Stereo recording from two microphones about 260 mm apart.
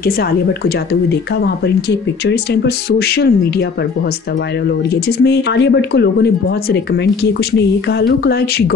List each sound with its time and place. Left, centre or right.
2.2 s speech: left
5.2 s speech: left